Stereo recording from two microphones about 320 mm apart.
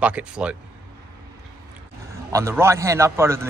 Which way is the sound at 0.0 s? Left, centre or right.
Centre.